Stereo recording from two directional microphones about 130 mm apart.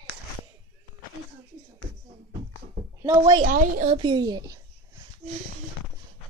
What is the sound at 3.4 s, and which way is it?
Speech, 90° right.